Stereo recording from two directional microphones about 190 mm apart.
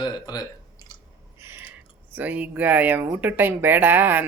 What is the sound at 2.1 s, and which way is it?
Speech, 10° right (ahead or behind).